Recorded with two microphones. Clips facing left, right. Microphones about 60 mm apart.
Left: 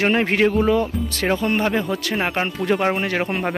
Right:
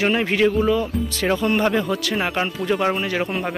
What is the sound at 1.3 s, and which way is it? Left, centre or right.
Speech, centre.